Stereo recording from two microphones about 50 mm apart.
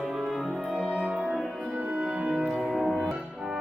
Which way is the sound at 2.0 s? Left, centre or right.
Centre.